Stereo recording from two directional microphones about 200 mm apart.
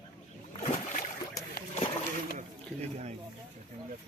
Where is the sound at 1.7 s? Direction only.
30° left (ahead or behind).